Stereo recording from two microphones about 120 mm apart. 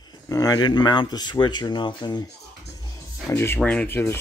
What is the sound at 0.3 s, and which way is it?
Speech, 30° left (ahead or behind).